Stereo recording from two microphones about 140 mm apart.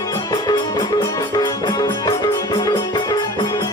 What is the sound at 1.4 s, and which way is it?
Music, 30° left (ahead or behind).